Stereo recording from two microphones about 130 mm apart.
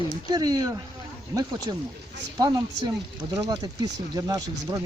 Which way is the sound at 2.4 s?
30° right (ahead or behind).